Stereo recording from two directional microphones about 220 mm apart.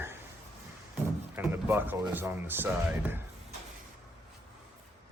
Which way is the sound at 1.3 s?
10° right (ahead or behind).